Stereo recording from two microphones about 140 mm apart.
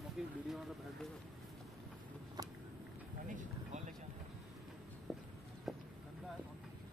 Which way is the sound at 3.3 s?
65° right (ahead or behind).